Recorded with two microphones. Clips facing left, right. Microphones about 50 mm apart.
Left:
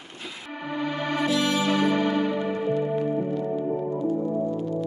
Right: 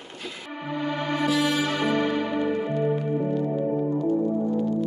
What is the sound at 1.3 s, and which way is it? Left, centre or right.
Music, centre.